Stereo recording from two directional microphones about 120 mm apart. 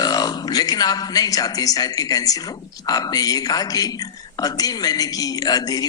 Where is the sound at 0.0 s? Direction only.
35° left (ahead or behind).